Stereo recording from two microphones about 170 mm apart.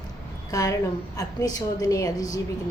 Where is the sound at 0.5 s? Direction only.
20° left (ahead or behind).